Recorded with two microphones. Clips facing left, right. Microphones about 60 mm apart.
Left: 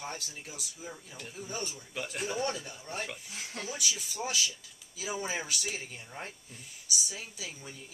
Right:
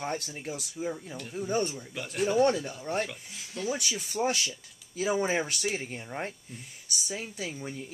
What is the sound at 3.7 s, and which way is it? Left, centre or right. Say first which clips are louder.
Speech: right 5 dB; right.